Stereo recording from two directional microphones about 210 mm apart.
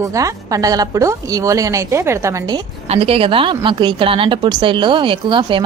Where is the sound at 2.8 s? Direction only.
30° right (ahead or behind).